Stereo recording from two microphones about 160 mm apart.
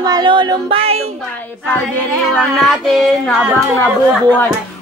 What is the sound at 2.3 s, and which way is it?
Child singing, 5° left (ahead or behind).